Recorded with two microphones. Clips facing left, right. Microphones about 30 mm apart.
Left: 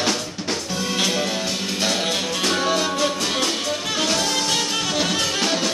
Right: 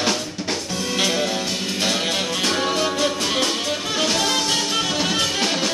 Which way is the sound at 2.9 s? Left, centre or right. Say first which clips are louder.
Right 1 dB; centre.